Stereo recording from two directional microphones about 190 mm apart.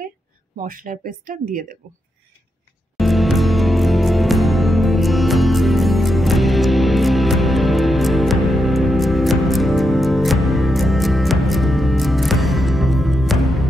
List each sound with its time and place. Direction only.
0.6 s speech: 45° right (ahead or behind)
3.0 s music: centre (ahead or behind)